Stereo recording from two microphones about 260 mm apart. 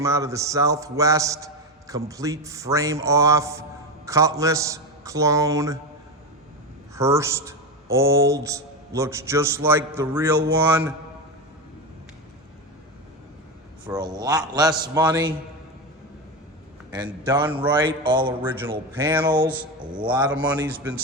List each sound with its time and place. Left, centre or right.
0.0 s a man's voice: centre
6.9 s a man's voice: centre
13.8 s a man's voice: centre
16.9 s a man's voice: centre
20.3 s a man's voice: centre